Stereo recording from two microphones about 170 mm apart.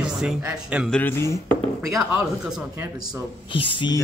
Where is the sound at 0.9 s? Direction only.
15° left (ahead or behind).